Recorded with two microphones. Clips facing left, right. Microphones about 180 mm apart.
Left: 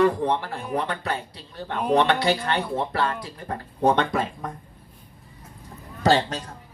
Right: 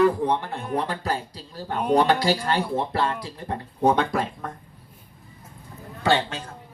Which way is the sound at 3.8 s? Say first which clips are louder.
Even; 5° right (ahead or behind).